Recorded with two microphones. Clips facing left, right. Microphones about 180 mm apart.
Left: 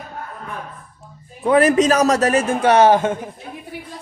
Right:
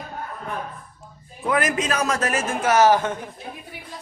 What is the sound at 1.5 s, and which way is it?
A man's voice, 35° left (ahead or behind).